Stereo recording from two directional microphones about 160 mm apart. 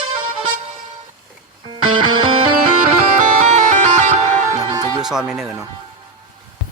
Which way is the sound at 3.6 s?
50° right (ahead or behind).